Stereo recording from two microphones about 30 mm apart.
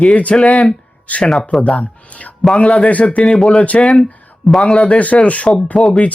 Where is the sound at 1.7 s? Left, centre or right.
Left.